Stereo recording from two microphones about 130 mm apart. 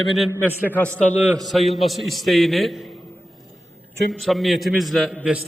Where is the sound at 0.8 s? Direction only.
15° right (ahead or behind).